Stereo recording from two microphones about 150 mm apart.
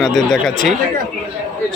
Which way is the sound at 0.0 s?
Centre (ahead or behind).